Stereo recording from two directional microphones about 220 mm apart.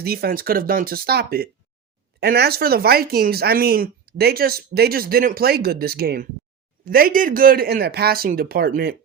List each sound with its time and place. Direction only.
0.0 s speech: 45° right (ahead or behind)